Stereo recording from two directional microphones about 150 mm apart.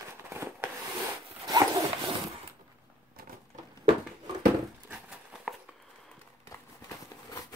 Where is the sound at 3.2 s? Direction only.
85° right.